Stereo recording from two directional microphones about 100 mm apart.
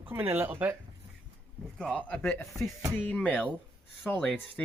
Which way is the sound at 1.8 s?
10° left (ahead or behind).